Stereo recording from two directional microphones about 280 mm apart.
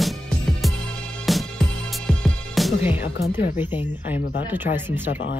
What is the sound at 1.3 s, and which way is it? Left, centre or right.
Music, centre.